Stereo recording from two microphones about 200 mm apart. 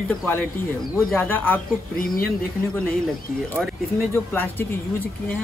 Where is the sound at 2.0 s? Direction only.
45° left (ahead or behind).